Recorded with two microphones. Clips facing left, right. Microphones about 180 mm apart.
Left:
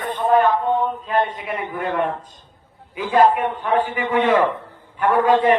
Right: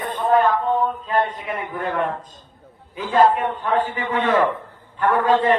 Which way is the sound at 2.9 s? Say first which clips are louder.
Left 1 dB; 15° left (ahead or behind).